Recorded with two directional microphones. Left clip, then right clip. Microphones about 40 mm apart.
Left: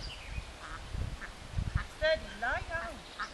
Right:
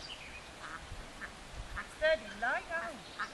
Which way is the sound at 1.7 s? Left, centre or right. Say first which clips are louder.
Even; centre.